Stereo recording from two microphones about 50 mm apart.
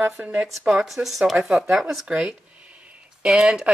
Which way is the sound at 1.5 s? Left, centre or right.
Centre.